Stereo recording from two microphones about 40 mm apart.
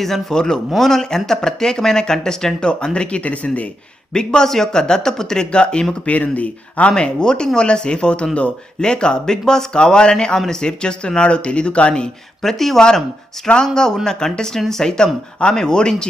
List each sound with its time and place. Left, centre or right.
0.3 s speech: centre
6.0 s speech: left
6.9 s speech: left
12.4 s speech: centre
13.5 s speech: centre